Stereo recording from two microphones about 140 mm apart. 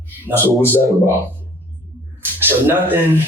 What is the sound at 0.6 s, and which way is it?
Speech, 15° left (ahead or behind).